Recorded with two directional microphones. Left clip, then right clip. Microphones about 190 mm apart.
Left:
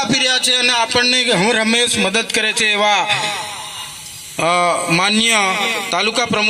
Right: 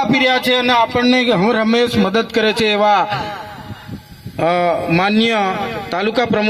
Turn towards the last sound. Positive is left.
turn(degrees=-55)  # may be behind; listen again after turning